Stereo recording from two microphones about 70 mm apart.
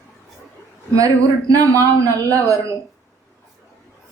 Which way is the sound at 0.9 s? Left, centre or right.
Right.